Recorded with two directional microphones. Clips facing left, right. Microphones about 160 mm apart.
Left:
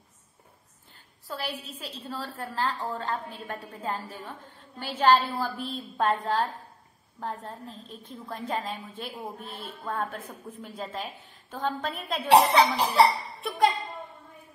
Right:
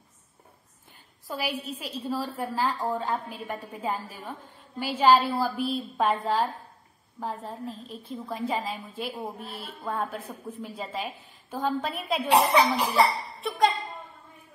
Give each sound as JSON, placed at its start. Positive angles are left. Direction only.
{"t": 1.2, "sound": "a woman's voice", "side_deg": -10}
{"t": 12.3, "sound": "speech", "side_deg": 35}
{"t": 13.4, "sound": "speech", "side_deg": 0}